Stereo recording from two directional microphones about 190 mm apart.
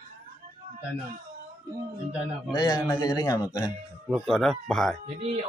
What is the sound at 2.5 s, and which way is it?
Speech, 20° left (ahead or behind).